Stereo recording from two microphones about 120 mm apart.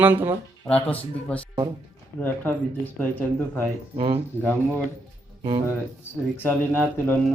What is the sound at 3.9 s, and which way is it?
Speech, 50° right (ahead or behind).